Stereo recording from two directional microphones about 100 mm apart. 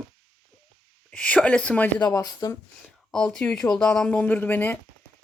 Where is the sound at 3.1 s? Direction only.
5° left (ahead or behind).